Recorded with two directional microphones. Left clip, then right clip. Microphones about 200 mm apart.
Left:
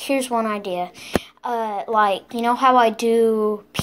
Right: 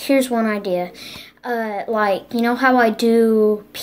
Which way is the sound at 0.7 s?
45° left (ahead or behind).